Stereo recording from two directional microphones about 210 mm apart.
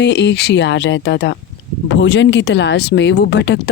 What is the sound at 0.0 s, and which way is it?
Speech, 55° left (ahead or behind).